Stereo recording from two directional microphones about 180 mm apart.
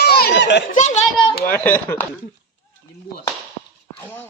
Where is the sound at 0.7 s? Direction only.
40° left (ahead or behind).